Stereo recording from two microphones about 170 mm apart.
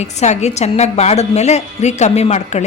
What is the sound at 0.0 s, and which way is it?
A woman's voice, 40° left (ahead or behind).